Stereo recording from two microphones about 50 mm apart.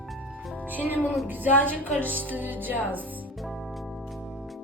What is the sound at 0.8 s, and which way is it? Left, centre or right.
Music, right.